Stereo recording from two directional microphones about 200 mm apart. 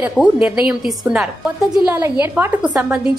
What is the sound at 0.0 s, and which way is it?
A woman's voice, 5° right (ahead or behind).